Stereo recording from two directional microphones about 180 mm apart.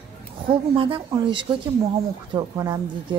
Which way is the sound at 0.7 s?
30° right (ahead or behind).